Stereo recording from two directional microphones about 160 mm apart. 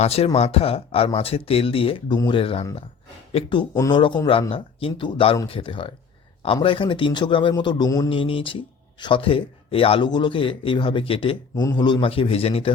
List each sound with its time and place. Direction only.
0.0 s speech: 40° left (ahead or behind); by 8.1 s 20° left (ahead or behind)
8.1 s speech: 35° left (ahead or behind)